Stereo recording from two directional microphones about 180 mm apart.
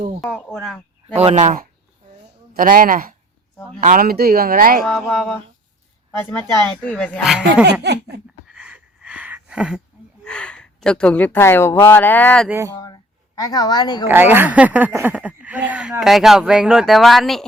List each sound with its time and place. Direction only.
0.2 s speech: 5° left (ahead or behind)
1.1 s speech: 35° right (ahead or behind); by 4.8 s 55° right (ahead or behind)
4.8 s speech: centre (ahead or behind)
7.7 s speech: 70° right (ahead or behind)
8.4 s a sound: 5° right (ahead or behind)
10.2 s speech: 5° left (ahead or behind)
12.5 s speech: 15° right (ahead or behind)
12.8 s a sound: 20° left (ahead or behind)
14.1 s speech: 10° right (ahead or behind)